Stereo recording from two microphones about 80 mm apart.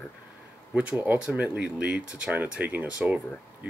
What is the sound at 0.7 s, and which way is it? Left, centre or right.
Speech, right.